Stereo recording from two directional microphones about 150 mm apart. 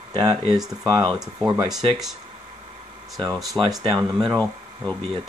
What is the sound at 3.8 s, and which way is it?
Speech, 25° right (ahead or behind).